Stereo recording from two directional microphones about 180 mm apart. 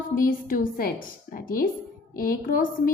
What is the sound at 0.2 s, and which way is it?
A woman's voice, 50° left (ahead or behind).